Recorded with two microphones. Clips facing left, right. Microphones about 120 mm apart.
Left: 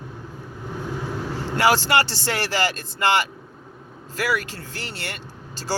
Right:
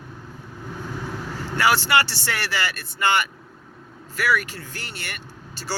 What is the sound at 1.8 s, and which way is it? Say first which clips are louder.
Speech: left 1 dB; 30° left (ahead or behind).